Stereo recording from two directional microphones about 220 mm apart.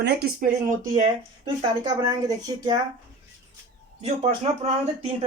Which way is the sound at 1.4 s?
20° right (ahead or behind).